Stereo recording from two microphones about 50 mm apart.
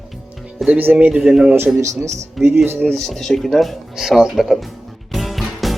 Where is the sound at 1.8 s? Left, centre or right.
Right.